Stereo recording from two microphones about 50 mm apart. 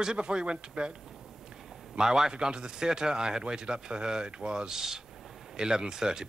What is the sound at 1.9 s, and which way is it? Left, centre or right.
A man's voice, centre.